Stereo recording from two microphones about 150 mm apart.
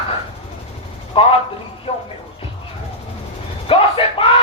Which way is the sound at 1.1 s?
35° left (ahead or behind).